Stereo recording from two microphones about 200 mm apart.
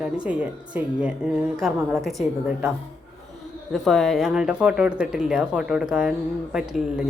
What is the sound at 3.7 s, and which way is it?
Speech, centre (ahead or behind).